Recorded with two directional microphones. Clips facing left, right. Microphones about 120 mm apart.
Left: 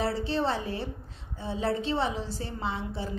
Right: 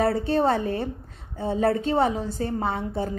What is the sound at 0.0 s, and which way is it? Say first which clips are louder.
A woman's voice: right 7 dB; 50° right (ahead or behind).